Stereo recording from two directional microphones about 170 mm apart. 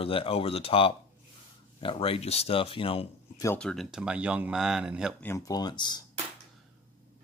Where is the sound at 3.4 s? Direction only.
5° left (ahead or behind).